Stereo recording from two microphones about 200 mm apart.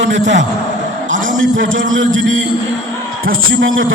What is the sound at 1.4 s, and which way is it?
A man's voice, 75° right (ahead or behind).